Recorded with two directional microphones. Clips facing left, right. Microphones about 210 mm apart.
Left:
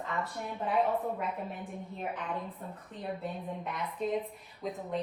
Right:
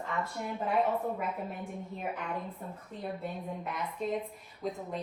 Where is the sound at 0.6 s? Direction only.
Centre (ahead or behind).